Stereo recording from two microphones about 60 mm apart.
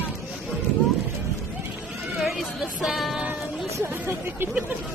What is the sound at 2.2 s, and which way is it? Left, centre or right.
Music, centre.